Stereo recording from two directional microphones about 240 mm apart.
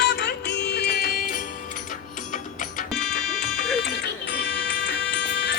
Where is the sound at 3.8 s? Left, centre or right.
Left.